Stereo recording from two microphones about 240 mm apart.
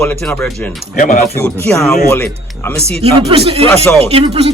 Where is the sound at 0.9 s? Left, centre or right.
Left.